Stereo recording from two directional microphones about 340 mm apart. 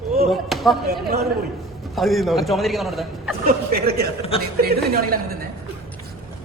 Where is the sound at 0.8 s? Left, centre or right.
Right.